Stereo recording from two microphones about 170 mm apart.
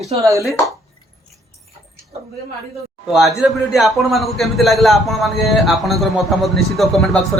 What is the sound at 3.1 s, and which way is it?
A man's voice, centre (ahead or behind).